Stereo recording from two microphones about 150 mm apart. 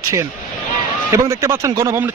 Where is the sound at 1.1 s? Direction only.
20° right (ahead or behind).